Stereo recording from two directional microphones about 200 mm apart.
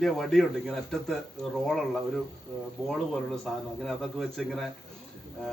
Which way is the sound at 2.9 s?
Centre (ahead or behind).